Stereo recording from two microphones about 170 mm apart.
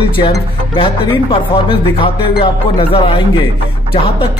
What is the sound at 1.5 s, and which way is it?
A man's voice, 30° left (ahead or behind).